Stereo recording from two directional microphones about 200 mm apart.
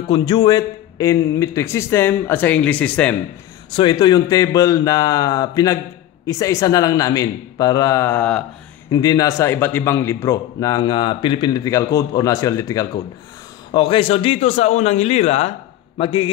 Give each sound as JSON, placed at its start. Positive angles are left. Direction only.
{"t": 0.1, "sound": "a man's voice", "side_deg": 20}
{"t": 3.7, "sound": "a man's voice", "side_deg": 20}
{"t": 8.9, "sound": "a man's voice", "side_deg": 20}